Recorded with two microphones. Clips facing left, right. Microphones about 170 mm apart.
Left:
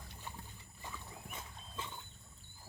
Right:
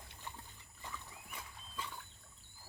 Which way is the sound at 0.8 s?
20° left (ahead or behind).